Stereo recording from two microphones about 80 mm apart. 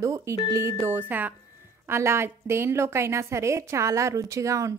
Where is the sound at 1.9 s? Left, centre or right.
Right.